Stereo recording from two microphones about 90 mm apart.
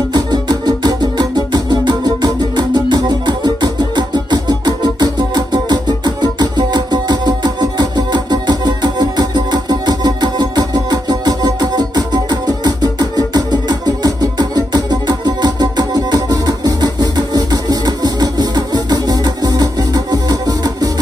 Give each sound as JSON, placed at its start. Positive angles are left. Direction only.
{"t": 0.1, "sound": "music", "side_deg": -50}